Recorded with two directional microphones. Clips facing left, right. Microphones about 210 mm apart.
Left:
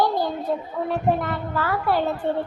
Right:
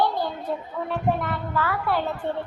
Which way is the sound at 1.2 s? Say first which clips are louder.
Left 1 dB; 40° left (ahead or behind).